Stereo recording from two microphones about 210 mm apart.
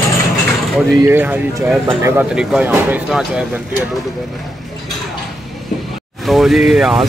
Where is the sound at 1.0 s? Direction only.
10° right (ahead or behind).